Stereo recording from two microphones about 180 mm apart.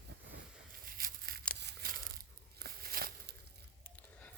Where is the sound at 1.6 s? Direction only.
60° right (ahead or behind).